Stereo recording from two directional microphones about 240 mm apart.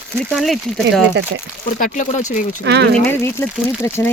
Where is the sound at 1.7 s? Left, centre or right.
Left.